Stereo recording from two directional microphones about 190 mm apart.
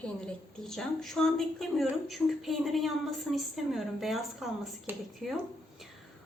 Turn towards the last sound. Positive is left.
turn(degrees=0)  # may be behind; listen again after turning